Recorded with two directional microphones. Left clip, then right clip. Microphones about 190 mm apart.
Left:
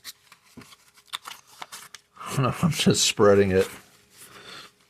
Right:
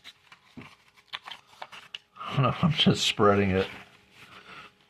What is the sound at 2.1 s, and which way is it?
Speech, 15° left (ahead or behind).